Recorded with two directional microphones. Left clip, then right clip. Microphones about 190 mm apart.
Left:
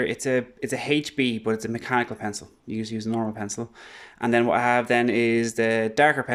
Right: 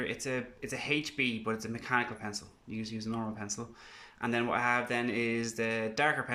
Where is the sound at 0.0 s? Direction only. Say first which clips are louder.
Left 11 dB; 40° left (ahead or behind).